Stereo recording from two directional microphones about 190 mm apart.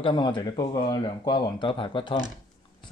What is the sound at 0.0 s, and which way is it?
Speech, 25° left (ahead or behind).